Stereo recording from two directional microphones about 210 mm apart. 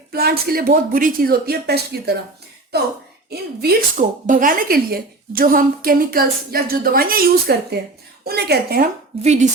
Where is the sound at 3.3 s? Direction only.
50° right (ahead or behind).